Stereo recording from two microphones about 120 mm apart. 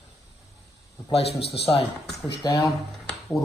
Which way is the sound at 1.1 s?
55° left (ahead or behind).